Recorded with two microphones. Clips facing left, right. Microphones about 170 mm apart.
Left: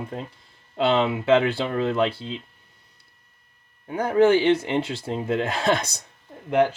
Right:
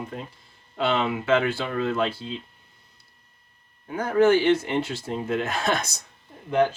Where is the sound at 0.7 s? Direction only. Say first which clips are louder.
Left 3 dB; 30° left (ahead or behind).